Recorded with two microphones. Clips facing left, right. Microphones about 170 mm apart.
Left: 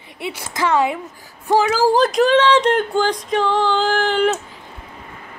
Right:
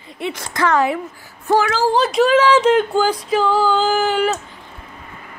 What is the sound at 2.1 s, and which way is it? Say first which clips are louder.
Female singing: right 1 dB; 5° right (ahead or behind).